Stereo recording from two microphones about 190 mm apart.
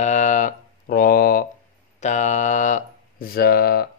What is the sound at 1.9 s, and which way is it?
Speech, 40° left (ahead or behind).